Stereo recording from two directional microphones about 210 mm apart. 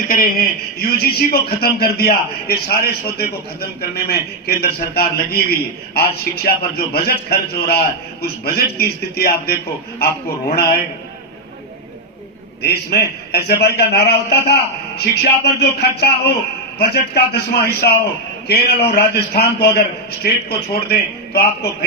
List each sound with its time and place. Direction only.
0.1 s speech: 45° left (ahead or behind)
13.3 s speech: 50° left (ahead or behind)